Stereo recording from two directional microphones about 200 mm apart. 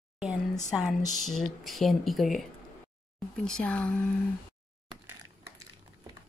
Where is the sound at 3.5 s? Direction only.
5° left (ahead or behind).